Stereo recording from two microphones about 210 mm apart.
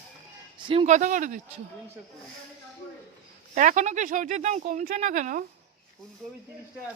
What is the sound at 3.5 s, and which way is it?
Speech, 35° right (ahead or behind).